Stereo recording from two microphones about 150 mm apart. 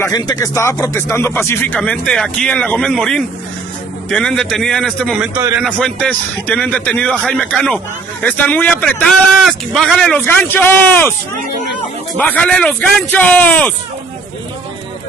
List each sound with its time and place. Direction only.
0.0 s speech: 25° left (ahead or behind)
1.8 s speech: 5° left (ahead or behind)
10.2 s speech: 15° left (ahead or behind)
12.2 s speech: 10° left (ahead or behind)